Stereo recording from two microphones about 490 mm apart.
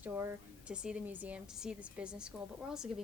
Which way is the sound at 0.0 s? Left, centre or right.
Centre.